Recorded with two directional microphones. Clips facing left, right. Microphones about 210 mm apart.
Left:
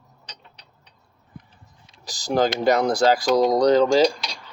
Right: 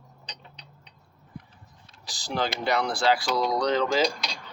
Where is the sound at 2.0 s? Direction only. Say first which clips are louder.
Left 8 dB; 45° left (ahead or behind).